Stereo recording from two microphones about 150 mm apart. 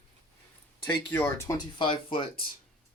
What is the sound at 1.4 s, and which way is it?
Speech, 25° left (ahead or behind).